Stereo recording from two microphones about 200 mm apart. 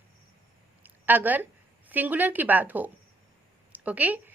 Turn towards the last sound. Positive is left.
turn(degrees=-10)  # may be behind; listen again after turning